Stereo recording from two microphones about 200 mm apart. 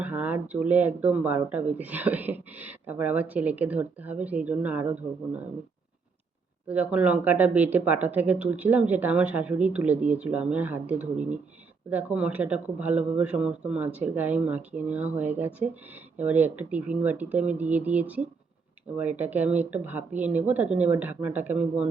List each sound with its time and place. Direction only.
0.0 s speech: 10° right (ahead or behind)
6.7 s speech: 5° right (ahead or behind)